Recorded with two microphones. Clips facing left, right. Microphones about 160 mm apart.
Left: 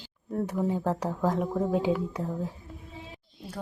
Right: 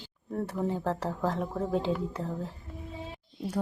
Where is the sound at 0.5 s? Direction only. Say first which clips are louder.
Left 2 dB; 10° left (ahead or behind).